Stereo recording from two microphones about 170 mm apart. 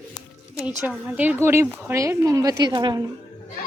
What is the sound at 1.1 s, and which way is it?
A woman's voice, 10° right (ahead or behind).